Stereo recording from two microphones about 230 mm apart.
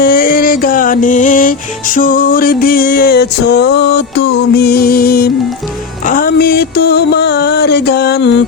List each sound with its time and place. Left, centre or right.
0.0 s music: left